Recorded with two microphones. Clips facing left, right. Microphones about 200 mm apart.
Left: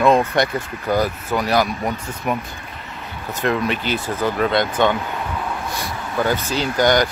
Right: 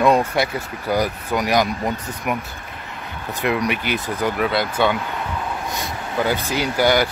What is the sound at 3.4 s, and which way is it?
Speech, 15° right (ahead or behind).